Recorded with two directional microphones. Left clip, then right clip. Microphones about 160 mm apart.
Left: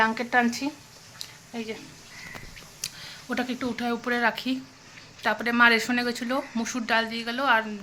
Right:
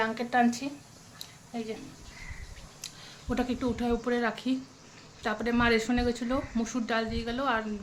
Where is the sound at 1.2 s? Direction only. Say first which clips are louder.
Left 2 dB; 25° left (ahead or behind).